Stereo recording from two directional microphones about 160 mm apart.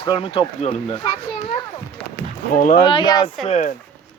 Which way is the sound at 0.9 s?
35° left (ahead or behind).